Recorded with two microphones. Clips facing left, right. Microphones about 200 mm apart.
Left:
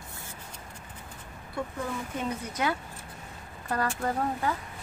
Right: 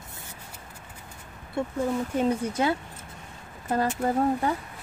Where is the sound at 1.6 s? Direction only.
25° right (ahead or behind).